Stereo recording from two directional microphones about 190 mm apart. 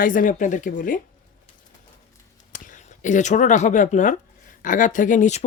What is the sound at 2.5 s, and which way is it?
Speech, 45° left (ahead or behind).